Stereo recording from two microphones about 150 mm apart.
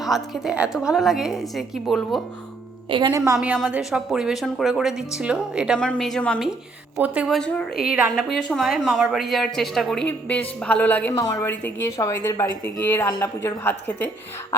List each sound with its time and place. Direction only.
0.0 s speech: centre (ahead or behind)
3.1 s a woman's voice: 20° right (ahead or behind)
3.3 s speech: 10° right (ahead or behind)
5.8 s speech: 5° left (ahead or behind)
7.0 s speech: 10° right (ahead or behind)
7.3 s a woman's voice: 5° left (ahead or behind)
11.1 s a woman's voice: 25° left (ahead or behind)